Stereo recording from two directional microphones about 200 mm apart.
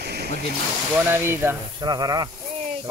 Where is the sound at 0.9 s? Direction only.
10° right (ahead or behind).